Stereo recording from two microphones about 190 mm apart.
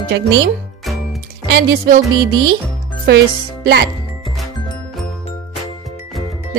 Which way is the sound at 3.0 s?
60° right (ahead or behind).